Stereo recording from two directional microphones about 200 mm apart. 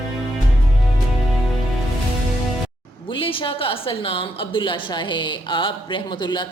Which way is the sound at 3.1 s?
25° left (ahead or behind).